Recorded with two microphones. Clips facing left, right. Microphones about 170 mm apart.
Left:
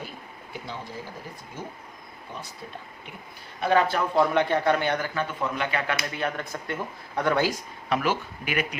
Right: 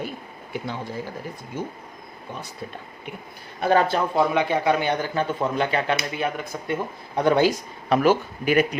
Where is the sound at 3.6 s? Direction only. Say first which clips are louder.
Right 3 dB; 40° right (ahead or behind).